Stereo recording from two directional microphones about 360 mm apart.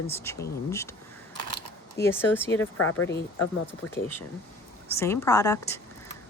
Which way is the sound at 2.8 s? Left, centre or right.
Left.